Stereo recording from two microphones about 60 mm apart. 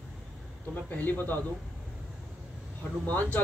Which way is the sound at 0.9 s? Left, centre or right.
Left.